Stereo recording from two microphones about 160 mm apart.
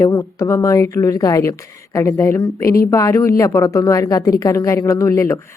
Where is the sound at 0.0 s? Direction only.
20° left (ahead or behind).